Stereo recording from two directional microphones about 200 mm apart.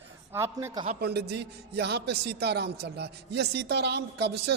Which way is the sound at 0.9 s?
55° right (ahead or behind).